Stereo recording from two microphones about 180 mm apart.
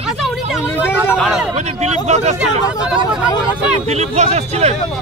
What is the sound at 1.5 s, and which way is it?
Speech, 40° right (ahead or behind).